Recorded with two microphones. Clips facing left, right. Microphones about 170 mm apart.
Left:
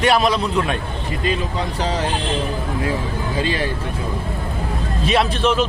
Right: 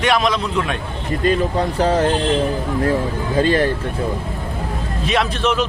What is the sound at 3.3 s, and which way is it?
Speech, 50° right (ahead or behind).